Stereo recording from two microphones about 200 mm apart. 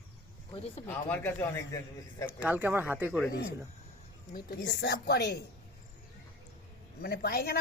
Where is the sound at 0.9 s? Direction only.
10° left (ahead or behind).